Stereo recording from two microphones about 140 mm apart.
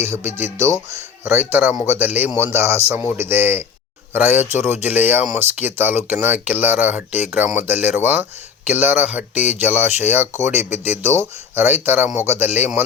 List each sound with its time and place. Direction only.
0.0 s speech: 20° right (ahead or behind)